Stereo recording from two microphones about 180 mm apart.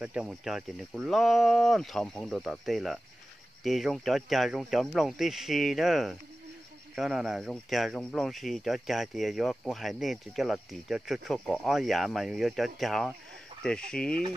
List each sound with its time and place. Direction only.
0.0 s speech: 5° right (ahead or behind)